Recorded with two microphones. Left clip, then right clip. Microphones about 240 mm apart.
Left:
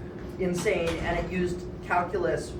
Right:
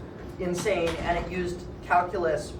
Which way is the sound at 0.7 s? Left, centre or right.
Centre.